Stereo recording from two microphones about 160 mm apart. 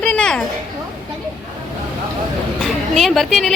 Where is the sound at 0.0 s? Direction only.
5° left (ahead or behind).